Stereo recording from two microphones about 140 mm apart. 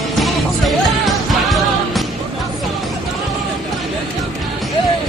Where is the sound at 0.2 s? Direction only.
Centre (ahead or behind).